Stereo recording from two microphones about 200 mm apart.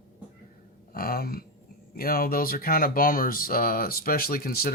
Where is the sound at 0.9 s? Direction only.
50° left (ahead or behind).